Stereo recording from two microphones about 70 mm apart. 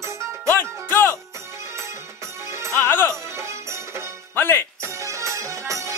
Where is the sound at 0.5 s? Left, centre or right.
Left.